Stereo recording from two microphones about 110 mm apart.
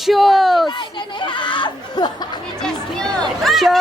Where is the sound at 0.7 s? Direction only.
45° left (ahead or behind).